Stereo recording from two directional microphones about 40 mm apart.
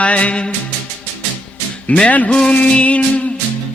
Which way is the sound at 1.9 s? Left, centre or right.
Left.